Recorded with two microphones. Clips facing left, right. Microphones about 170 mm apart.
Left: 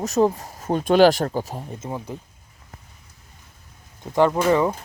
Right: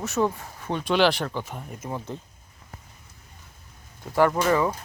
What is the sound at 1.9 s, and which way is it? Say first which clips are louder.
Speech: left 1 dB; 10° left (ahead or behind).